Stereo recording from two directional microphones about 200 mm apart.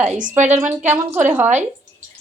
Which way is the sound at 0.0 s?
40° right (ahead or behind).